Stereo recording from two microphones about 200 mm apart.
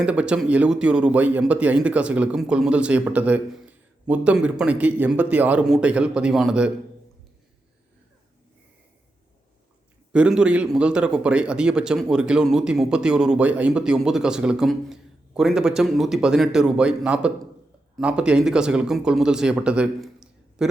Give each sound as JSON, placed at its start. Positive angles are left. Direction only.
{"t": 0.0, "sound": "speech", "side_deg": -5}
{"t": 10.1, "sound": "speech", "side_deg": -5}